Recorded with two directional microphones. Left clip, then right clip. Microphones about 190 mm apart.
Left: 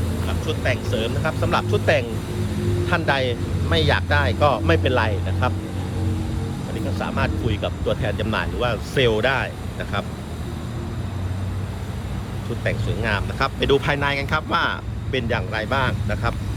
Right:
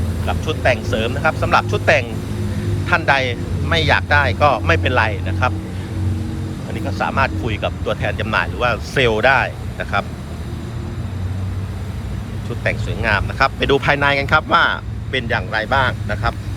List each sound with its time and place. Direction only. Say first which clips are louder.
0.3 s speech: right 8 dB; 10° left (ahead or behind)
6.7 s speech: right 7 dB; 15° left (ahead or behind)
12.6 s speech: right 5 dB; 15° left (ahead or behind)